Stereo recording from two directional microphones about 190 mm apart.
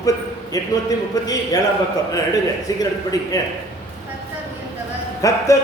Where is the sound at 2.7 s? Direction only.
20° left (ahead or behind).